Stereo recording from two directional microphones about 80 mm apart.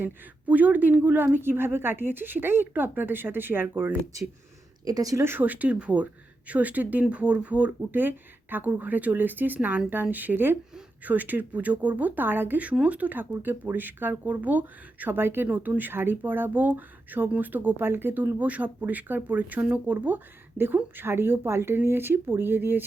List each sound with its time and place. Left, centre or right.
0.0 s speech: right
4.1 s speech: right
5.1 s speech: right